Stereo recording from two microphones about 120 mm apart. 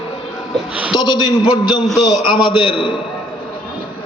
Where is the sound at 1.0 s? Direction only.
35° left (ahead or behind).